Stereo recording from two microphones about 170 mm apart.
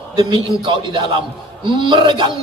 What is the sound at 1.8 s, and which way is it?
Speech, 30° right (ahead or behind).